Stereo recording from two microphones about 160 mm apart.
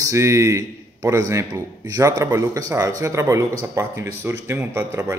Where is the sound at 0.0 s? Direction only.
20° right (ahead or behind).